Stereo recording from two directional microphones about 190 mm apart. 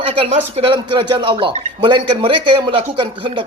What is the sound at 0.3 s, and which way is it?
A man's voice, 30° right (ahead or behind).